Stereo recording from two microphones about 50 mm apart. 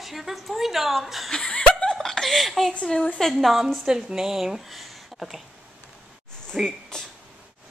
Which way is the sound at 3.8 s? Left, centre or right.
Centre.